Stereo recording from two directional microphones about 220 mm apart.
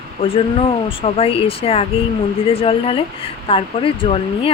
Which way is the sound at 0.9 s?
25° left (ahead or behind).